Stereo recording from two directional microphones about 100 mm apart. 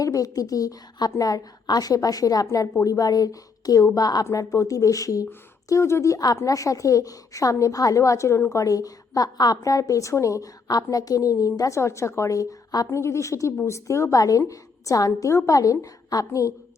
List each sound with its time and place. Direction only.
0.0 s a woman's voice: 35° left (ahead or behind)
8.6 s a woman's voice: 35° left (ahead or behind)